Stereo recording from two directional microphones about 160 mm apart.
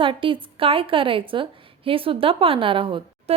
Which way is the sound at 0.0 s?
30° right (ahead or behind).